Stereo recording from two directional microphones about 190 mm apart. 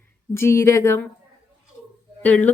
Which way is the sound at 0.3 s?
15° left (ahead or behind).